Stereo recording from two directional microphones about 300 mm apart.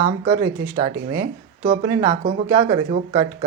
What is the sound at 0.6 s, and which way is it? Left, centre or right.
Speech, centre.